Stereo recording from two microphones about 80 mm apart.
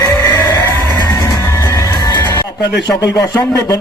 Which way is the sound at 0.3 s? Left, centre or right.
Left.